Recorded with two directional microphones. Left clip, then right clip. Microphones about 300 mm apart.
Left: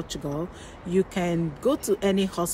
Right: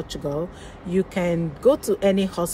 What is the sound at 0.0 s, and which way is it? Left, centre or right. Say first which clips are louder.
Speech: right 4 dB; centre.